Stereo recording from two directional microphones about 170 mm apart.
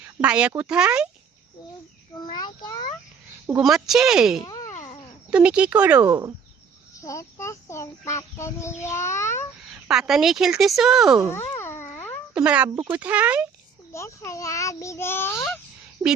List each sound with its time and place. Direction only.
0.2 s speech: 5° right (ahead or behind)
2.2 s a child's voice: 25° left (ahead or behind)
3.6 s speech: centre (ahead or behind)
4.4 s a sound: 20° left (ahead or behind)
5.3 s speech: 5° right (ahead or behind)
7.0 s speech: 20° left (ahead or behind)
9.6 s speech: 5° right (ahead or behind)
11.3 s a sound: 15° left (ahead or behind)
12.3 s speech: 5° right (ahead or behind)
13.9 s speech: 15° left (ahead or behind)